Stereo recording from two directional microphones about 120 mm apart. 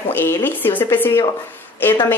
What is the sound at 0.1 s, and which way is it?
A woman's voice, 15° left (ahead or behind).